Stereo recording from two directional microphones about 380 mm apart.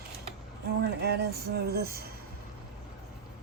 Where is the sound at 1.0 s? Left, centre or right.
Right.